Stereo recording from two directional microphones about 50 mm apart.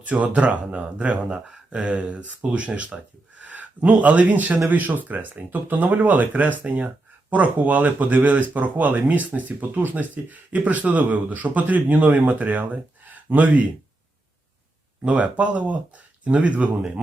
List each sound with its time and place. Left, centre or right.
0.0 s speech: right
15.0 s speech: right